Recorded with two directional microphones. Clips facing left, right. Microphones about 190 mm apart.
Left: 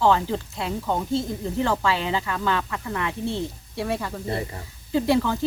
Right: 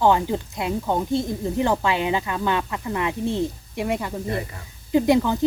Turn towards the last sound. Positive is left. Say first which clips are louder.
# right 3 dB
turn(degrees=-20)  # may be behind; listen again after turning